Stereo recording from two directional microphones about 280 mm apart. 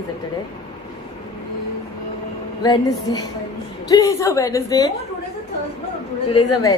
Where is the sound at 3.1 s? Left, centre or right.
Centre.